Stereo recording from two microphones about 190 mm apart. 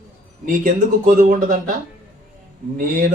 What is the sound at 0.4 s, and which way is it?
Speech, 40° right (ahead or behind).